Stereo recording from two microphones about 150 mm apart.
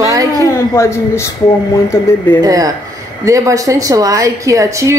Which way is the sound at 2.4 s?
25° right (ahead or behind).